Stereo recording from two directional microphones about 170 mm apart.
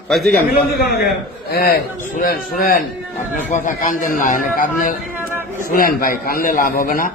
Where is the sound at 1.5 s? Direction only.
65° left (ahead or behind).